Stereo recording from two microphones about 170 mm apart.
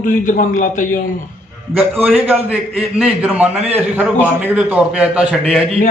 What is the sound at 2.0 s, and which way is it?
A man's voice, 10° right (ahead or behind).